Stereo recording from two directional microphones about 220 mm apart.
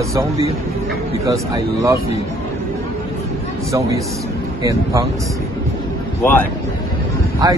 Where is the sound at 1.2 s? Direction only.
15° right (ahead or behind).